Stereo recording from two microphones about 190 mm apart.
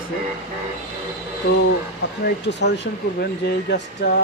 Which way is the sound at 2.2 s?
65° left (ahead or behind).